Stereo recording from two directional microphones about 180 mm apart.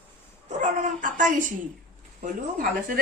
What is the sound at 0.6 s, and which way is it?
Dog, 45° right (ahead or behind).